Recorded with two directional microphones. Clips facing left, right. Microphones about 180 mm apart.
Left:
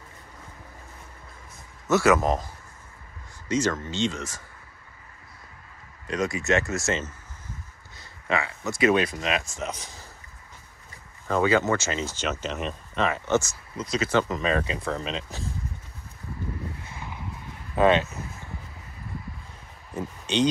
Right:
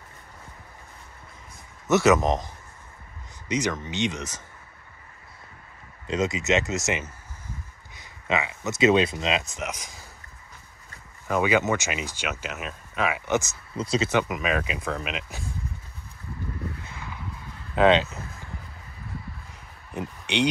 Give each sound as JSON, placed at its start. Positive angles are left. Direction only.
{"t": 1.9, "sound": "speech", "side_deg": -20}
{"t": 6.0, "sound": "speech", "side_deg": -25}
{"t": 11.2, "sound": "speech", "side_deg": -15}
{"t": 13.7, "sound": "speech", "side_deg": -30}